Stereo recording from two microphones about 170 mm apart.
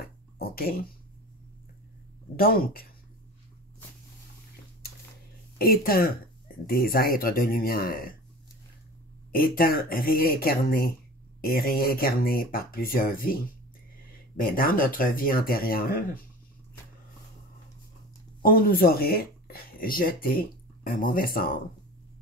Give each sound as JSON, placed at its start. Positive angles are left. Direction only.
{"t": 0.0, "sound": "a sound", "side_deg": 60}
{"t": 2.3, "sound": "speech", "side_deg": 60}
{"t": 5.6, "sound": "speech", "side_deg": 60}
{"t": 9.3, "sound": "speech", "side_deg": 60}
{"t": 18.4, "sound": "speech", "side_deg": 60}